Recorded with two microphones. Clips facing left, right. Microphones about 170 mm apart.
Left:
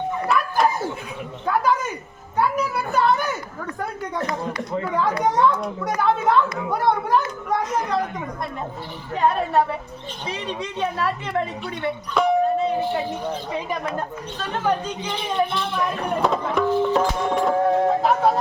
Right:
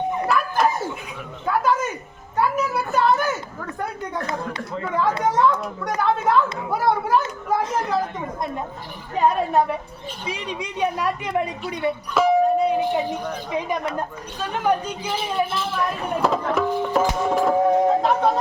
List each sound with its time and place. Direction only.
0.3 s bow-wow: centre (ahead or behind)
1.5 s speech: centre (ahead or behind)
4.8 s speech: centre (ahead or behind)
10.2 s a woman's voice: 10° right (ahead or behind)
12.5 s a sound: 15° right (ahead or behind)
14.3 s speech: 10° right (ahead or behind)
16.6 s music: 10° right (ahead or behind)
17.8 s speech: centre (ahead or behind)